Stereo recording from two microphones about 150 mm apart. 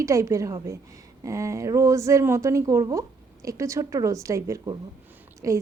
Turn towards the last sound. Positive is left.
turn(degrees=-20)  # may be behind; listen again after turning